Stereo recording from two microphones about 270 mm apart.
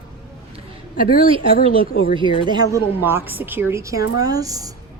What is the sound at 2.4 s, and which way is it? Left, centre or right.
Speech, centre.